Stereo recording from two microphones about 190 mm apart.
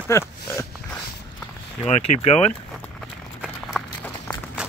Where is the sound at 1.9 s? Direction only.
35° left (ahead or behind).